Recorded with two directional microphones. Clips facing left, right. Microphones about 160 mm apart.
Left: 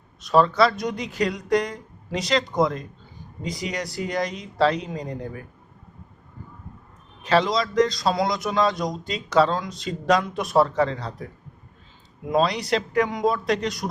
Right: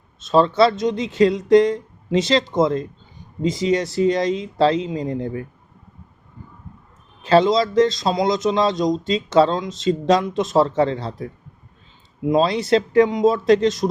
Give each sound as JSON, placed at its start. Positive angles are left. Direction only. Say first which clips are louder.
{"t": 0.2, "sound": "speech", "louder": "right 3 dB", "side_deg": -25}
{"t": 7.2, "sound": "speech", "louder": "right 6 dB", "side_deg": -30}
{"t": 12.3, "sound": "speech", "louder": "right 5 dB", "side_deg": -25}